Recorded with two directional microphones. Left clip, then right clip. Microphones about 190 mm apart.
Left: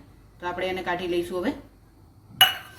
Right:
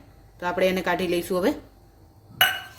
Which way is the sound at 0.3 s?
70° right (ahead or behind).